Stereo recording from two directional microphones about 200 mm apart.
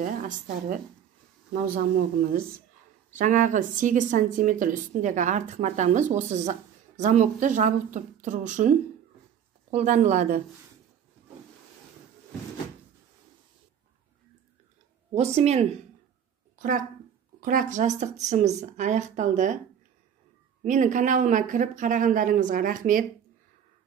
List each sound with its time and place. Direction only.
1.5 s speech: 40° right (ahead or behind)
9.8 s speech: 35° right (ahead or behind)
15.1 s speech: 30° right (ahead or behind)
16.5 s a sound: 40° right (ahead or behind)
17.4 s speech: 45° right (ahead or behind)
20.6 s speech: 40° right (ahead or behind)